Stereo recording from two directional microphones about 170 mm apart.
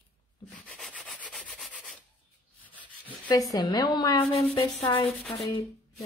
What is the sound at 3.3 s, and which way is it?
A woman's voice, 20° left (ahead or behind).